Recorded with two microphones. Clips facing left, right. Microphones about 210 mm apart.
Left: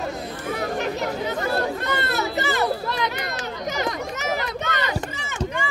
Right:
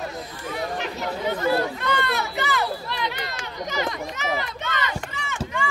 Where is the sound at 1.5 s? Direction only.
40° left (ahead or behind).